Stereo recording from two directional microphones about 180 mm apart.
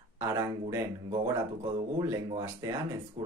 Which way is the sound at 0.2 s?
15° right (ahead or behind).